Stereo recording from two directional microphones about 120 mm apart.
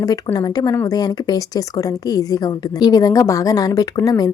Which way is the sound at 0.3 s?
35° left (ahead or behind).